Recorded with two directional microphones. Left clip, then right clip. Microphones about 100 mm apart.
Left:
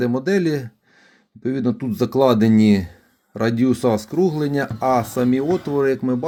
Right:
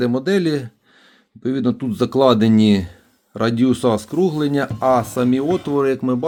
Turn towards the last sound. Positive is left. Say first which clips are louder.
# right 1 dB
turn(degrees=-5)  # may be behind; listen again after turning